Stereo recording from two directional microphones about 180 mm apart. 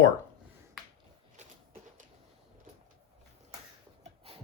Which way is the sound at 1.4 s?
40° right (ahead or behind).